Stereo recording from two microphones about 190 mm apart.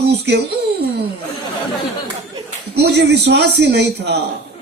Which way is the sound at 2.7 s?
60° right (ahead or behind).